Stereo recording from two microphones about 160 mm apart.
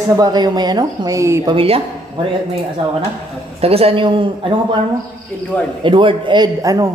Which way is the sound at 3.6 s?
40° right (ahead or behind).